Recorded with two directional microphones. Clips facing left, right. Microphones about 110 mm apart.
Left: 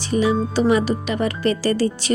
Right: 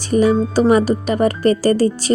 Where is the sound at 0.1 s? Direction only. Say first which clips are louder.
Right 5 dB; 45° right (ahead or behind).